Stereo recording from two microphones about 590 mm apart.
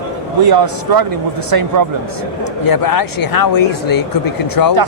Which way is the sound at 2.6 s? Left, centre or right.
Left.